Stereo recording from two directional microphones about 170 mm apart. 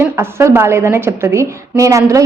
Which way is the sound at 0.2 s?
15° right (ahead or behind).